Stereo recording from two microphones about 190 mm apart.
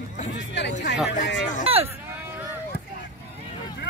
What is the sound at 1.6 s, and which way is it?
Speech, 30° right (ahead or behind).